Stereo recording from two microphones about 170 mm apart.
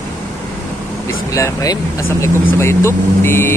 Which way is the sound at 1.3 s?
20° left (ahead or behind).